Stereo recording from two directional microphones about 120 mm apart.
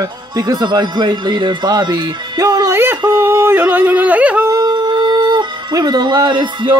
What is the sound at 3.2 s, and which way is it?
Yodeling, 15° right (ahead or behind).